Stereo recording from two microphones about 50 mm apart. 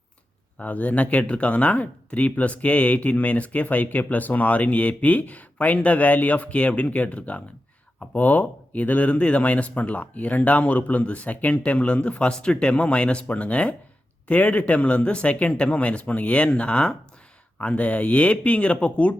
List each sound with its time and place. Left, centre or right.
0.6 s speech: left